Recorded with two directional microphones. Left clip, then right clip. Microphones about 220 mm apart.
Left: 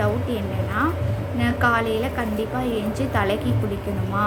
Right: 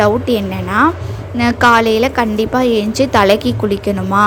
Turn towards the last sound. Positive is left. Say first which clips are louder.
# right 11 dB
turn(degrees=-40)  # may be behind; listen again after turning